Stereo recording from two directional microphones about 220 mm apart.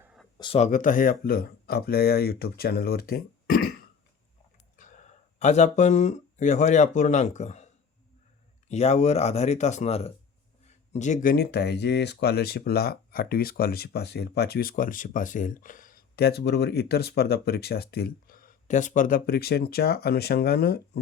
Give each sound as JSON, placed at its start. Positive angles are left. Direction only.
{"t": 0.3, "sound": "speech", "side_deg": 25}
{"t": 4.8, "sound": "speech", "side_deg": 35}